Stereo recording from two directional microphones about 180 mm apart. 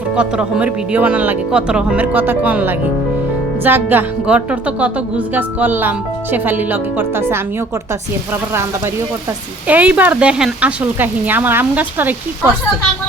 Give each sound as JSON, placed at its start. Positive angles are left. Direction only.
{"t": 0.2, "sound": "speech", "side_deg": -5}
{"t": 9.6, "sound": "speech", "side_deg": -10}